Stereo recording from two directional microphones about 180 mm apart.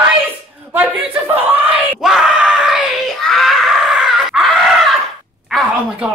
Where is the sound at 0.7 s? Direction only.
10° right (ahead or behind).